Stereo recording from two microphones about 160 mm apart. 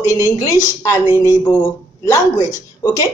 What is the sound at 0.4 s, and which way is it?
A woman's voice, 20° left (ahead or behind).